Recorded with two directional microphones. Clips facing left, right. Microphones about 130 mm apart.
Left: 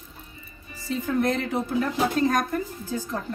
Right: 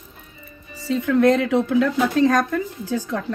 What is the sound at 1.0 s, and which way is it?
Speech, 70° right (ahead or behind).